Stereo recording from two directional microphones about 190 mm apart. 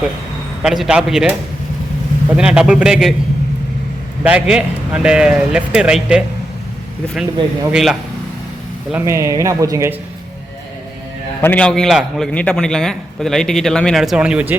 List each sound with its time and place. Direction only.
0.6 s a man's voice: centre (ahead or behind)
4.2 s a man's voice: 5° right (ahead or behind)
7.7 s a man's voice: centre (ahead or behind)
8.9 s speech: 15° right (ahead or behind)
11.3 s a man's voice: 10° left (ahead or behind); by 14.6 s 10° right (ahead or behind)